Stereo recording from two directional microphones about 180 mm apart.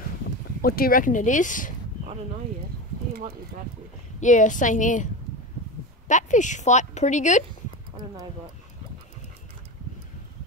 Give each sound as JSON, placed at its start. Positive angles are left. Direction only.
{"t": 0.6, "sound": "a woman's voice", "side_deg": 55}
{"t": 3.1, "sound": "clip-clop", "side_deg": -55}
{"t": 4.2, "sound": "a woman's voice", "side_deg": 45}